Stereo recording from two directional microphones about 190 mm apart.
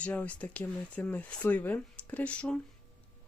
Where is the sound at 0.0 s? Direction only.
5° left (ahead or behind).